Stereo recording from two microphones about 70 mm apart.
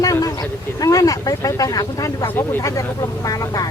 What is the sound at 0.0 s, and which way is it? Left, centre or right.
Speech, left.